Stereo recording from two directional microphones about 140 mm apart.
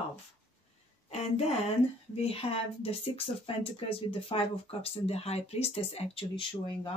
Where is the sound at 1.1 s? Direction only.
50° left (ahead or behind).